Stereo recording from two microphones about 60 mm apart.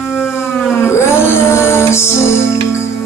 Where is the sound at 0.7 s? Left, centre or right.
Left.